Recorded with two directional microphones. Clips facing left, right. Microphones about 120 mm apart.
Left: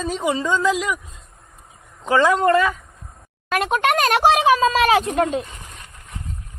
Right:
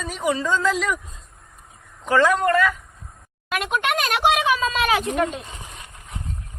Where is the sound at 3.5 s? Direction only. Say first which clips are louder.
Left 4 dB; 40° left (ahead or behind).